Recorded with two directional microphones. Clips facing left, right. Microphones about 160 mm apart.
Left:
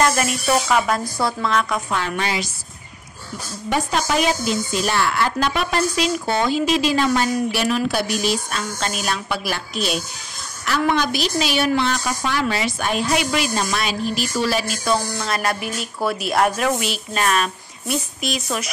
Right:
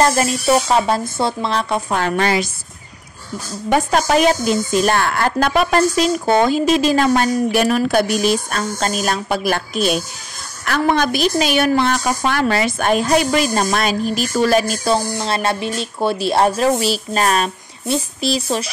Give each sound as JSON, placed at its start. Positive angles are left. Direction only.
{"t": 0.0, "sound": "speech", "side_deg": -30}
{"t": 2.0, "sound": "a woman's voice", "side_deg": -50}
{"t": 3.7, "sound": "a woman's voice", "side_deg": -50}
{"t": 14.9, "sound": "speech", "side_deg": -30}